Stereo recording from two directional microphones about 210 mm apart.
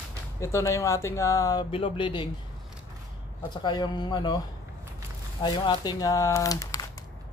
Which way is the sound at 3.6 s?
20° left (ahead or behind).